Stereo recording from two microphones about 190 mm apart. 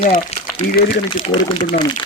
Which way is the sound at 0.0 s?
35° left (ahead or behind).